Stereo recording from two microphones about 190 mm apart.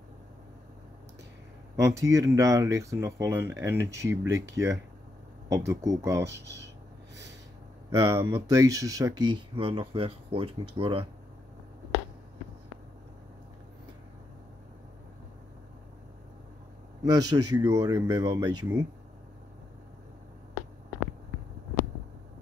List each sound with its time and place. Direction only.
1.8 s speech: 15° right (ahead or behind)
7.9 s speech: 25° right (ahead or behind)
8.4 s speech: 15° right (ahead or behind)
9.6 s speech: 30° right (ahead or behind)
17.0 s speech: 20° right (ahead or behind)